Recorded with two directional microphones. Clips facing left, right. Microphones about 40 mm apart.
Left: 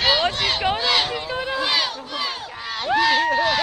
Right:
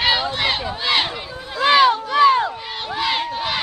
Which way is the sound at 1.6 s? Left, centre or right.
Right.